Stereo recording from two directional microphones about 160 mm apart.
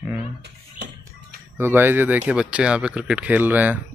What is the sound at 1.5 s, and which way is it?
Speech, 15° right (ahead or behind).